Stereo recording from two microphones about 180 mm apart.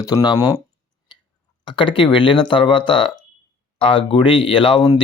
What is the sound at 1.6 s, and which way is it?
Speech, 25° left (ahead or behind).